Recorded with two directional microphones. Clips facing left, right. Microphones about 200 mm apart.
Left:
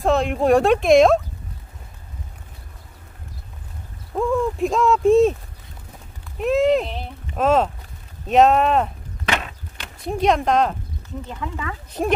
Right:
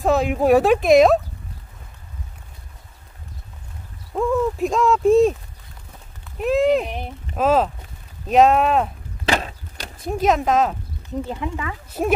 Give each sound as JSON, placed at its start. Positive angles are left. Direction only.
{"t": 0.0, "sound": "speech", "side_deg": -5}
{"t": 4.1, "sound": "speech", "side_deg": 0}
{"t": 6.3, "sound": "speech", "side_deg": 0}
{"t": 9.2, "sound": "a sound", "side_deg": -35}
{"t": 10.0, "sound": "speech", "side_deg": -5}